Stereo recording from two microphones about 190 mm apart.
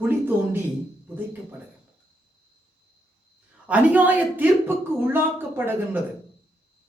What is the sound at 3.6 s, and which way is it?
Speech, 10° right (ahead or behind).